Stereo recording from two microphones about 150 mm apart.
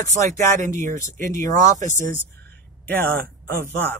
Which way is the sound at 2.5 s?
15° left (ahead or behind).